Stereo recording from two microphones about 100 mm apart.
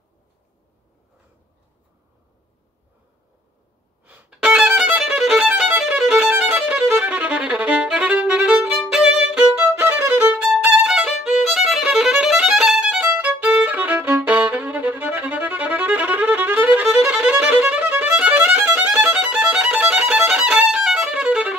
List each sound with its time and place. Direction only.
4.0 s violin: 10° right (ahead or behind)
9.8 s violin: 20° right (ahead or behind)